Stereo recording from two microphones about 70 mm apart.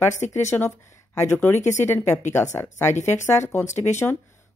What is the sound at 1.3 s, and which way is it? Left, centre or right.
Speech, left.